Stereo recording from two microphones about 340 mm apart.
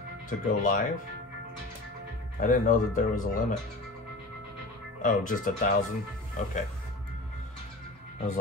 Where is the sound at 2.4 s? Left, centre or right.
Left.